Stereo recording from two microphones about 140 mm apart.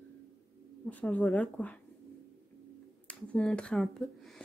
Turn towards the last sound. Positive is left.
turn(degrees=0)  # may be behind; listen again after turning